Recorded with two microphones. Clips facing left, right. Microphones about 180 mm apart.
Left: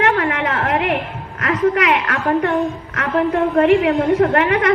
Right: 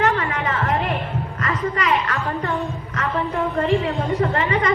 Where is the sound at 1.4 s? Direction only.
80° left.